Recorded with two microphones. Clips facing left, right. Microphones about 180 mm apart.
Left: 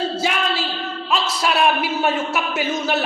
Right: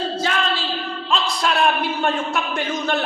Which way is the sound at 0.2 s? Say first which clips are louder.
Left 1 dB; 10° left (ahead or behind).